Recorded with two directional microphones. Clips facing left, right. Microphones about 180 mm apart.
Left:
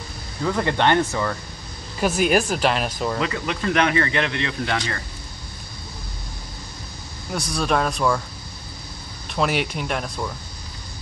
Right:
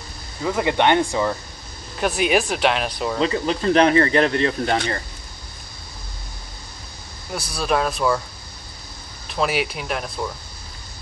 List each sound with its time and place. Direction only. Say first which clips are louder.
0.4 s speech: right 1 dB; 10° right (ahead or behind)
2.0 s speech: even; centre (ahead or behind)
3.2 s speech: right 4 dB; 30° right (ahead or behind)
7.3 s speech: even; centre (ahead or behind)
9.3 s speech: even; centre (ahead or behind)